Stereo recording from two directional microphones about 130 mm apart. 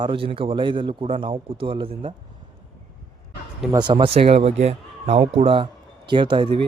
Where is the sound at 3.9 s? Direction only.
50° right (ahead or behind).